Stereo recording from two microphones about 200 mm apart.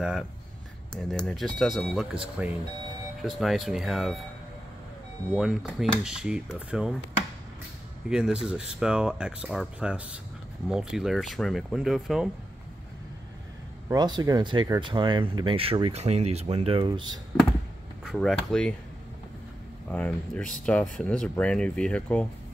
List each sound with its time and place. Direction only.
0.0 s speech: centre (ahead or behind)
3.2 s speech: centre (ahead or behind)
5.3 s speech: 5° right (ahead or behind)
8.1 s speech: 5° right (ahead or behind)
13.8 s speech: 20° right (ahead or behind)
18.0 s speech: centre (ahead or behind)
19.9 s speech: 5° left (ahead or behind)